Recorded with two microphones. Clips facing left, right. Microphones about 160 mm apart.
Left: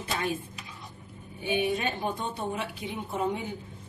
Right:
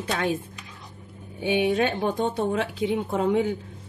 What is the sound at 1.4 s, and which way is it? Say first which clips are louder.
A woman's voice: right 6 dB; 90° right.